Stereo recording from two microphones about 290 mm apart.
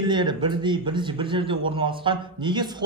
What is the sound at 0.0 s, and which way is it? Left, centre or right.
A man's voice, centre.